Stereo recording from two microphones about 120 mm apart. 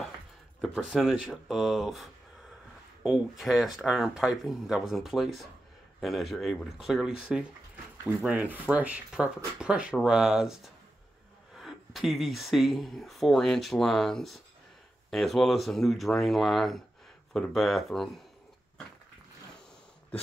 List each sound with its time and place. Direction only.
0.6 s speech: centre (ahead or behind)